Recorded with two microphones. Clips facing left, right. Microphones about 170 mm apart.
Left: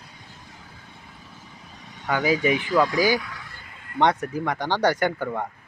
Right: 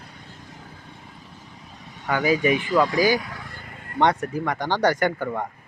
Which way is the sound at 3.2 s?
40° right (ahead or behind).